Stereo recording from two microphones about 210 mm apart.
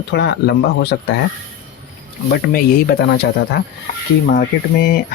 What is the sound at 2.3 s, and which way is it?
Speech, 50° left (ahead or behind).